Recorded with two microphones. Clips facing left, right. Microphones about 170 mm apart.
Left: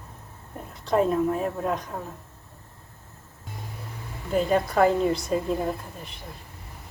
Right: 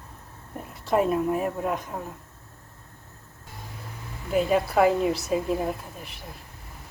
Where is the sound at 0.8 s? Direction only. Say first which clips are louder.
Left 1 dB; 5° right (ahead or behind).